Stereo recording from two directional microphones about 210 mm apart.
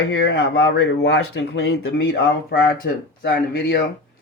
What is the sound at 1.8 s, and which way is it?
Speech, 45° left (ahead or behind).